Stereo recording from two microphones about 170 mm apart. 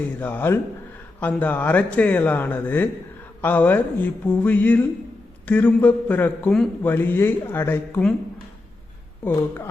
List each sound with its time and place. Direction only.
0.2 s a man's voice: 10° left (ahead or behind)
9.2 s a man's voice: 15° left (ahead or behind)